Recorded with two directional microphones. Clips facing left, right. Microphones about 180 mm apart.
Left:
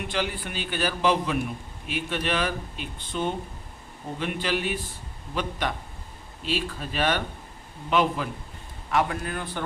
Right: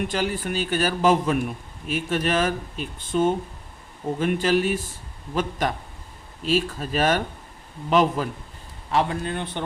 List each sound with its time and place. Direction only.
0.1 s a man's voice: 45° right (ahead or behind)
8.9 s a man's voice: 30° right (ahead or behind)